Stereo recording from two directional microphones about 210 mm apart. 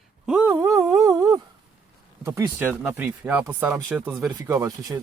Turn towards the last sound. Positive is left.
turn(degrees=-15)  # may be behind; listen again after turning